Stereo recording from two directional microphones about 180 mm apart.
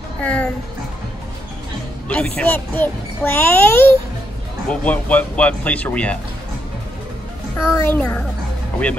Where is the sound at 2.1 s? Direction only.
5° left (ahead or behind).